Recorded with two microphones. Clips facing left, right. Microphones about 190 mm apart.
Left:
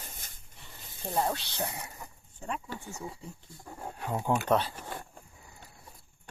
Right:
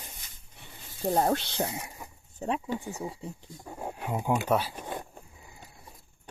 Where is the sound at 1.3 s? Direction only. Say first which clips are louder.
Right 7 dB; 60° right (ahead or behind).